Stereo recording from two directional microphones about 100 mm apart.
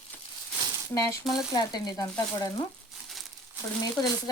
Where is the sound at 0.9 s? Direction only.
30° left (ahead or behind).